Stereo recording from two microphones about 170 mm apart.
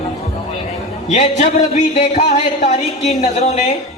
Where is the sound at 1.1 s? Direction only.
40° left (ahead or behind).